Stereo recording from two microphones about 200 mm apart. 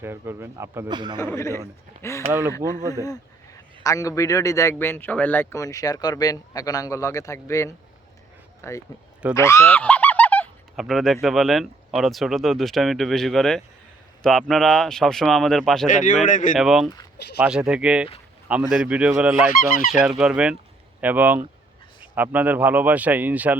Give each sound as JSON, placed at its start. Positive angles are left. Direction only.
{"t": 0.0, "sound": "speech", "side_deg": -10}
{"t": 1.2, "sound": "a man's voice", "side_deg": 15}
{"t": 16.2, "sound": "speech", "side_deg": 40}
{"t": 16.6, "sound": "speech", "side_deg": 0}